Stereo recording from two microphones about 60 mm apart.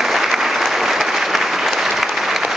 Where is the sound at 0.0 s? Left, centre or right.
Centre.